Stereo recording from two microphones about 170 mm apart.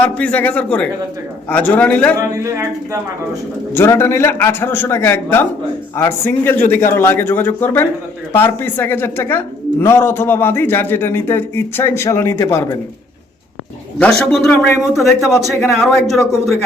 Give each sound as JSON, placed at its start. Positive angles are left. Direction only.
{"t": 0.0, "sound": "a man's voice", "side_deg": 10}
{"t": 2.3, "sound": "speech", "side_deg": -15}
{"t": 3.8, "sound": "a man's voice", "side_deg": 15}
{"t": 14.0, "sound": "a man's voice", "side_deg": 5}